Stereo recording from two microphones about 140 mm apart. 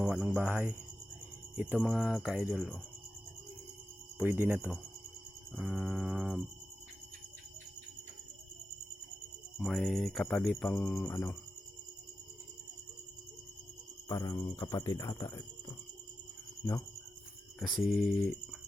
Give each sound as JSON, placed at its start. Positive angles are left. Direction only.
{"t": 0.0, "sound": "music", "side_deg": -10}
{"t": 1.8, "sound": "jingle bell", "side_deg": -5}
{"t": 4.2, "sound": "music", "side_deg": -15}
{"t": 9.6, "sound": "jingle bell", "side_deg": 0}
{"t": 11.0, "sound": "speech", "side_deg": 20}
{"t": 14.1, "sound": "speech", "side_deg": 30}
{"t": 17.6, "sound": "jingle bell", "side_deg": 0}